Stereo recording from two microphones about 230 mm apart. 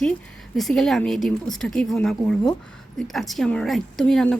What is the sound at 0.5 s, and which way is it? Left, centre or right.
Speech, centre.